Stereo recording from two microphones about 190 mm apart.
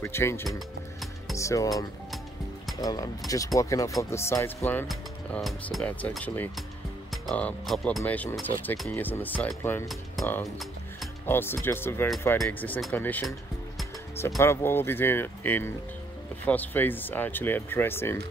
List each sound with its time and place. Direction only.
0.0 s speech: 15° left (ahead or behind)
2.8 s speech: 20° left (ahead or behind)
4.8 s speech: centre (ahead or behind)
10.4 s music: centre (ahead or behind)
11.2 s speech: 10° left (ahead or behind)
14.4 s speech: 10° left (ahead or behind)